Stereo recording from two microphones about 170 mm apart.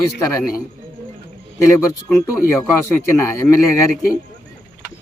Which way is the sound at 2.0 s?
15° left (ahead or behind).